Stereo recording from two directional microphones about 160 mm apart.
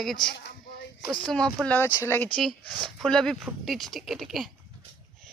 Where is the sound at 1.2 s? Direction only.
5° left (ahead or behind).